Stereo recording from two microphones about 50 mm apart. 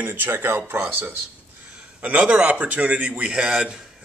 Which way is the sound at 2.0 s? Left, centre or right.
Right.